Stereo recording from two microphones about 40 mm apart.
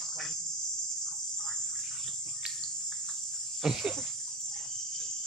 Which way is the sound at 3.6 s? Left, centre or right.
Centre.